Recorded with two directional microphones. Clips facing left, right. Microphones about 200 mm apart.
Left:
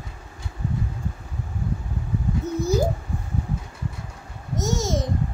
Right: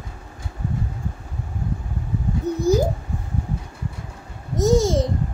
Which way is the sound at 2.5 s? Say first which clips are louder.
Right 3 dB; 35° right (ahead or behind).